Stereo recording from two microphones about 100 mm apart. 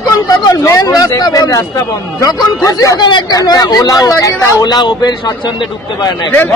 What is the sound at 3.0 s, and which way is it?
Speech, 50° left (ahead or behind).